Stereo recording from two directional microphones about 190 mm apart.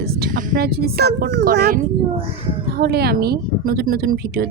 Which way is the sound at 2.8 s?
55° right (ahead or behind).